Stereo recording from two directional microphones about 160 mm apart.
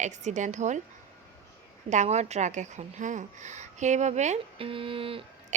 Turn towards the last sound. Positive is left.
turn(degrees=-50)  # may be behind; listen again after turning